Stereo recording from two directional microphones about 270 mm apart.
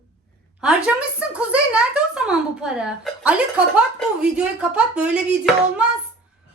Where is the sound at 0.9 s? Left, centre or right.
Centre.